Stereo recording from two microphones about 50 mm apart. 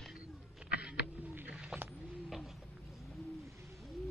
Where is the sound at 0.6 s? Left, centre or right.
Right.